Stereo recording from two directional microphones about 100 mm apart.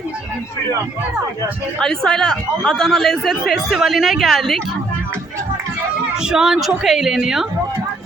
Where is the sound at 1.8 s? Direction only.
5° left (ahead or behind).